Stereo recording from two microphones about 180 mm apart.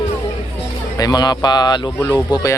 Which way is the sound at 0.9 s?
20° left (ahead or behind).